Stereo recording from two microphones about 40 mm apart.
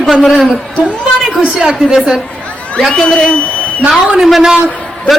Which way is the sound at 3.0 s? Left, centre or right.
Centre.